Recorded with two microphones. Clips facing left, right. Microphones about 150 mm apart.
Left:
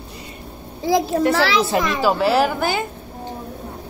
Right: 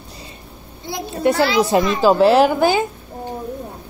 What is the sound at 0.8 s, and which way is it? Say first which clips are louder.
Speech: left 2 dB; 90° left.